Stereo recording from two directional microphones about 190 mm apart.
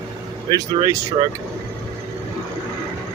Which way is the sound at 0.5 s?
20° right (ahead or behind).